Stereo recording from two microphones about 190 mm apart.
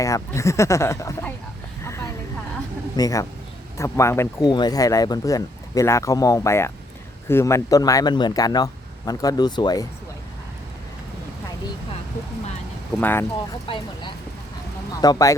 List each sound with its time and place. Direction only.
0.0 s speech: 15° left (ahead or behind)
1.8 s vehicle: 15° left (ahead or behind)
2.9 s speech: 20° left (ahead or behind)
13.0 s speech: 10° left (ahead or behind)
15.0 s speech: 20° left (ahead or behind)